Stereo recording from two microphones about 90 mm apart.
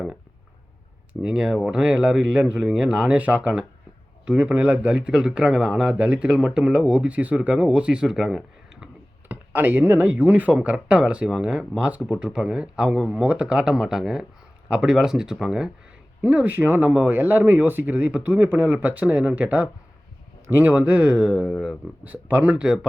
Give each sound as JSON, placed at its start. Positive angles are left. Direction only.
{"t": 1.2, "sound": "a man's voice", "side_deg": -10}
{"t": 9.3, "sound": "a man's voice", "side_deg": -20}